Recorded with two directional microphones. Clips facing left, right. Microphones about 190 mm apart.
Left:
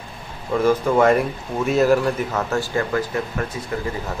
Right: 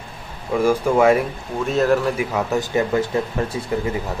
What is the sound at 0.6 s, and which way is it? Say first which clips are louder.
Speech: even; 10° right (ahead or behind).